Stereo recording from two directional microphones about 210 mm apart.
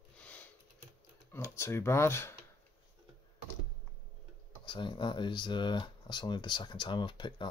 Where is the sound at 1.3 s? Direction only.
15° left (ahead or behind).